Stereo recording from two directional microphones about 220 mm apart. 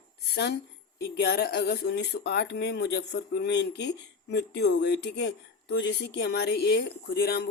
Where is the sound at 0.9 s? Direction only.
50° left (ahead or behind).